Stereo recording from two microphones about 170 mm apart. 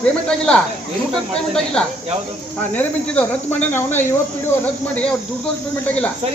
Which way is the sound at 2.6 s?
10° left (ahead or behind).